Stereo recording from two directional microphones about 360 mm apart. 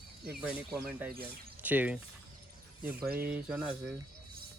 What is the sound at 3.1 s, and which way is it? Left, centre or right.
Speech, right.